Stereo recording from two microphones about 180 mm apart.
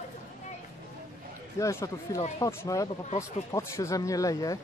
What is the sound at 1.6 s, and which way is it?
Speech, 15° left (ahead or behind).